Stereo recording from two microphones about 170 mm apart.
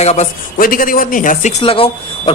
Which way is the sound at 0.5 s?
55° left (ahead or behind).